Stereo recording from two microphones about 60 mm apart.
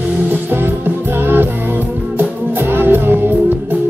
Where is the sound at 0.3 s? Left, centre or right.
Right.